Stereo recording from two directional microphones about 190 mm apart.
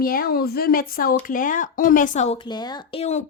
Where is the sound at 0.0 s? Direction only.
50° left (ahead or behind).